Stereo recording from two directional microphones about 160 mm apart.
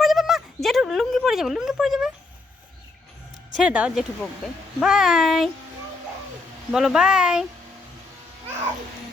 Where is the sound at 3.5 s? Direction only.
5° right (ahead or behind).